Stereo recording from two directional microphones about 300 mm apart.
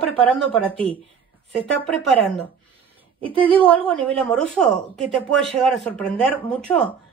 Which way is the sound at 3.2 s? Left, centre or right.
Centre.